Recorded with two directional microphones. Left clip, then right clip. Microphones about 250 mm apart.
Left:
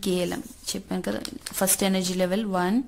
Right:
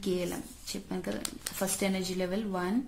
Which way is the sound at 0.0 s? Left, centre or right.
Left.